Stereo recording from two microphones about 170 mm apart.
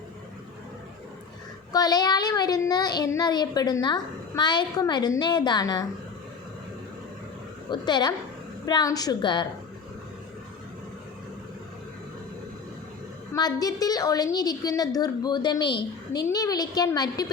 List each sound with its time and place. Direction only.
1.7 s speech: 20° left (ahead or behind)
7.7 s speech: 25° left (ahead or behind)
13.3 s speech: 20° left (ahead or behind)